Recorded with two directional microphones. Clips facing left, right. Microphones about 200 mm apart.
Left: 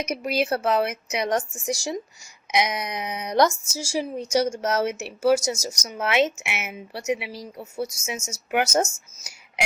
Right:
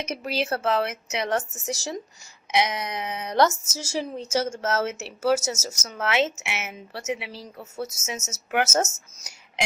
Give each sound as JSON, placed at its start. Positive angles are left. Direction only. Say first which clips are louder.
{"t": 0.0, "sound": "a woman's voice", "louder": "left 3 dB", "side_deg": 15}